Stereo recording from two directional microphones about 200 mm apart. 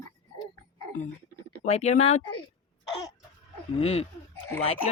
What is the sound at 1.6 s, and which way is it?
Speech, 35° left (ahead or behind).